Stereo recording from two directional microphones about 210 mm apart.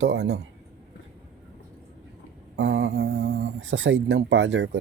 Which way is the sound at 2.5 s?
55° right (ahead or behind).